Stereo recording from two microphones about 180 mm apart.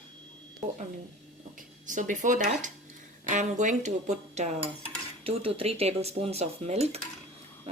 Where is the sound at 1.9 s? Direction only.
45° right (ahead or behind).